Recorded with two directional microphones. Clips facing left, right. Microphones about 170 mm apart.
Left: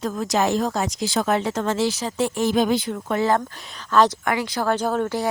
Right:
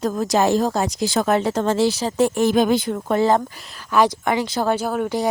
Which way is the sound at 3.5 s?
5° right (ahead or behind).